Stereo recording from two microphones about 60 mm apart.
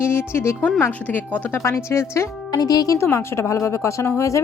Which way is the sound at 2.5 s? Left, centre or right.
Left.